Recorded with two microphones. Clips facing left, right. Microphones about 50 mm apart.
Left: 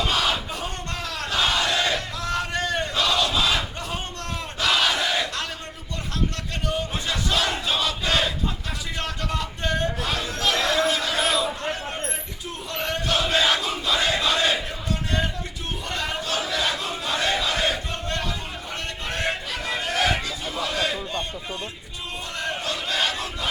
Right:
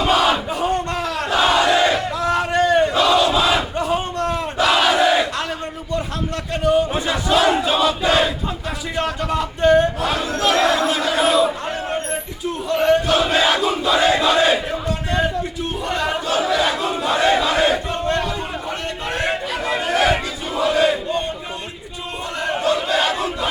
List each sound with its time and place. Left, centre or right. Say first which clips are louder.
0.0 s crowd: right 7 dB; centre
6.7 s battle cry: right 11 dB; centre
9.0 s crowd: right 9 dB; centre
11.6 s a sound: right 5 dB; centre
12.6 s battle cry: right 11 dB; centre
19.1 s chatter: right 5 dB; centre
20.6 s battle cry: right 10 dB; centre
22.4 s battle cry: right 10 dB; centre